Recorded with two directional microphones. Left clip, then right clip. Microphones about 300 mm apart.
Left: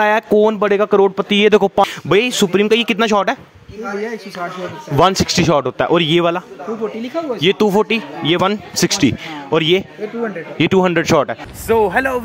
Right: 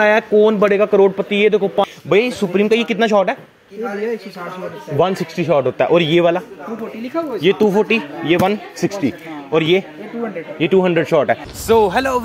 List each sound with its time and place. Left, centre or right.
0.0 s speech: left
4.9 s speech: left
7.4 s speech: left
11.6 s speech: centre